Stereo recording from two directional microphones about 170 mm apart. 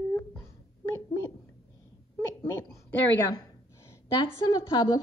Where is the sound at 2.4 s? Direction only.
15° left (ahead or behind).